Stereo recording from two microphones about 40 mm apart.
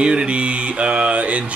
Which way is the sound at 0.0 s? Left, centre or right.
Right.